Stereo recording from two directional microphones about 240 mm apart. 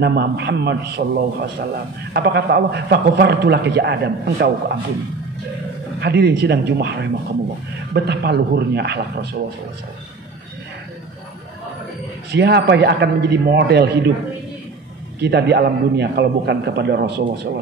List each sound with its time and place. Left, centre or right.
0.0 s a man's voice: right
5.9 s a man's voice: right
12.3 s a man's voice: right
15.1 s a man's voice: right